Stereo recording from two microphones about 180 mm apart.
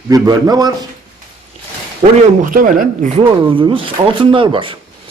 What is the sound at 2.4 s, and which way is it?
Speech, 50° right (ahead or behind).